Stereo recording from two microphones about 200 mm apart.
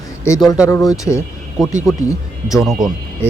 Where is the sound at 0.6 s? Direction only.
15° left (ahead or behind).